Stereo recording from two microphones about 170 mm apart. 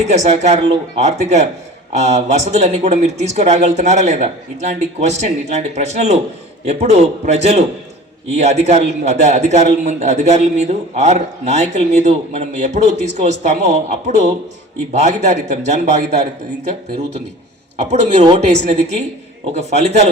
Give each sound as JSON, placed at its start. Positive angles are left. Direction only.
{"t": 0.1, "sound": "a man's voice", "side_deg": -40}
{"t": 17.7, "sound": "a man's voice", "side_deg": -40}